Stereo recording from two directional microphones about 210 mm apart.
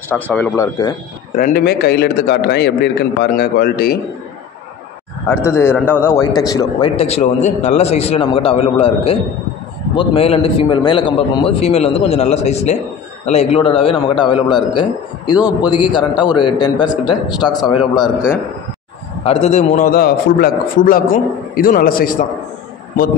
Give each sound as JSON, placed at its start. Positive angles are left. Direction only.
{"t": 0.1, "sound": "speech", "side_deg": 5}
{"t": 1.3, "sound": "a man's voice", "side_deg": 45}
{"t": 5.3, "sound": "a man's voice", "side_deg": 10}
{"t": 7.0, "sound": "a man's voice", "side_deg": 30}
{"t": 19.2, "sound": "a man's voice", "side_deg": 30}